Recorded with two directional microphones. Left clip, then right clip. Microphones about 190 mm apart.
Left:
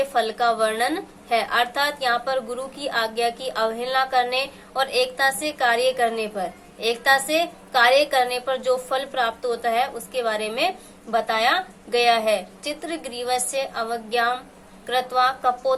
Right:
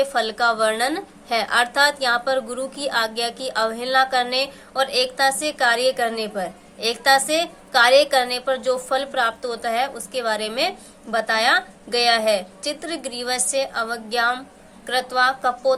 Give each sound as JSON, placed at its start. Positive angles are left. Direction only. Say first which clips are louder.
{"t": 0.0, "sound": "a woman's voice", "louder": "right 1 dB", "side_deg": -10}